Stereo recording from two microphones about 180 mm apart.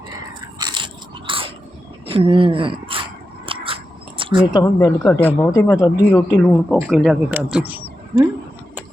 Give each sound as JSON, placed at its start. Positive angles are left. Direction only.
{"t": 0.6, "sound": "biting", "side_deg": -25}
{"t": 1.3, "sound": "a sound", "side_deg": -25}
{"t": 2.0, "sound": "speech", "side_deg": -30}
{"t": 3.4, "sound": "biting", "side_deg": -30}
{"t": 4.2, "sound": "a sound", "side_deg": -25}
{"t": 4.5, "sound": "speech", "side_deg": 20}
{"t": 5.0, "sound": "speech", "side_deg": 10}